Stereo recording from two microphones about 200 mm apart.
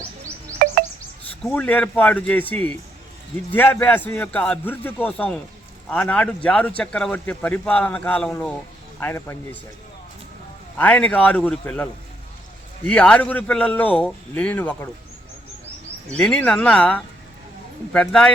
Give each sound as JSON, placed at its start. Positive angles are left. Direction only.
{"t": 0.6, "sound": "music", "side_deg": -45}
{"t": 1.5, "sound": "a man's voice", "side_deg": 10}
{"t": 10.8, "sound": "a man's voice", "side_deg": 10}
{"t": 16.1, "sound": "speech", "side_deg": 5}